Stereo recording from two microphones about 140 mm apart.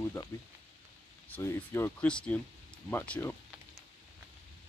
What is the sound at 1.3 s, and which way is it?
Speech, 15° left (ahead or behind).